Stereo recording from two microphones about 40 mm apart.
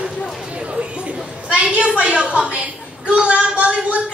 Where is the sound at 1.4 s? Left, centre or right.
Right.